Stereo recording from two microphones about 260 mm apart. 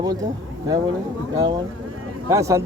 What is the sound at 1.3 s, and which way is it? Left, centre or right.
Speech, centre.